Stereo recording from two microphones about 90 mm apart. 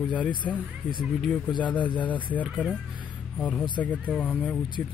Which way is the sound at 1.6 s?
15° left (ahead or behind).